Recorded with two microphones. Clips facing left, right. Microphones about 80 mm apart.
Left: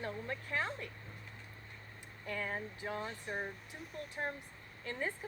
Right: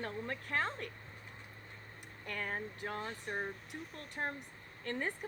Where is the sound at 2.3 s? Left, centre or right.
Right.